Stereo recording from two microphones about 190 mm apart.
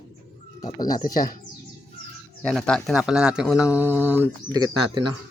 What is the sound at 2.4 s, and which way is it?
Speech, 5° left (ahead or behind).